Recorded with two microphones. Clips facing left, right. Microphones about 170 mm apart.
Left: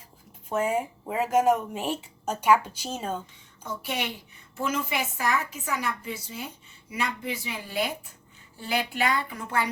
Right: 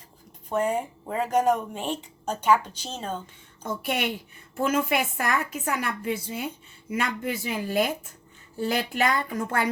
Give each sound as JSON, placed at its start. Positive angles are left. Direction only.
{"t": 0.5, "sound": "speech", "side_deg": 5}
{"t": 4.6, "sound": "a woman's voice", "side_deg": -55}
{"t": 6.9, "sound": "a woman's voice", "side_deg": -50}